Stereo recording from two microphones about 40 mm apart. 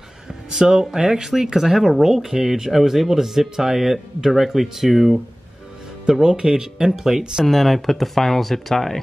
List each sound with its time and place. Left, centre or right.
0.3 s a sound: centre
0.7 s speech: centre
6.2 s speech: centre
7.4 s speech: centre